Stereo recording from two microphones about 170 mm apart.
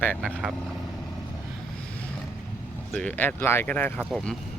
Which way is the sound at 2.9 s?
10° left (ahead or behind).